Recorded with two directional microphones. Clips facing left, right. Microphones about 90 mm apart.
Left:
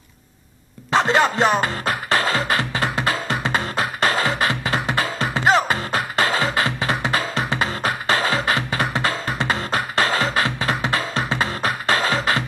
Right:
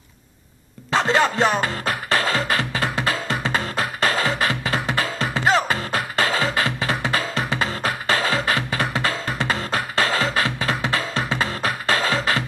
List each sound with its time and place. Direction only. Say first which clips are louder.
0.9 s music: left 1 dB; 5° left (ahead or behind)
7.0 s music: left 1 dB; 5° left (ahead or behind)